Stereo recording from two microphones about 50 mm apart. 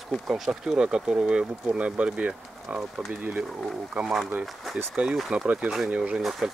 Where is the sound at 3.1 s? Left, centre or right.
Right.